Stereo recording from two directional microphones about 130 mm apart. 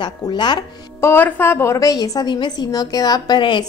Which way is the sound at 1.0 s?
15° left (ahead or behind).